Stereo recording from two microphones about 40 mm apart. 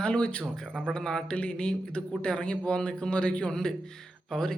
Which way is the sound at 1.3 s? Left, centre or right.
Left.